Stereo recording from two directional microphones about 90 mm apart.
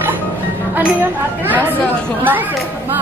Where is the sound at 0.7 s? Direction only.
20° right (ahead or behind).